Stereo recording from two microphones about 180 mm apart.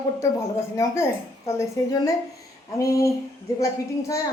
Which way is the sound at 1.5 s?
15° left (ahead or behind).